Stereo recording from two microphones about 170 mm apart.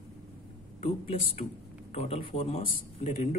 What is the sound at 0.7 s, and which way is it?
A man's voice, 35° left (ahead or behind).